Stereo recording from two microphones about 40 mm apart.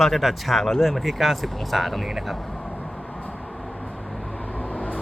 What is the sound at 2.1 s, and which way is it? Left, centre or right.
Speech, centre.